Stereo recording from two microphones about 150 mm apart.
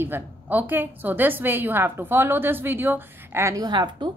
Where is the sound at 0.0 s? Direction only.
15° right (ahead or behind).